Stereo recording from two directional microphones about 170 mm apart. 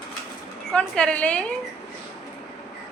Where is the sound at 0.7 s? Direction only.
5° left (ahead or behind).